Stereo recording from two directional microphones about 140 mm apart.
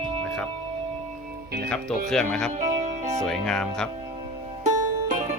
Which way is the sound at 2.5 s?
55° right (ahead or behind).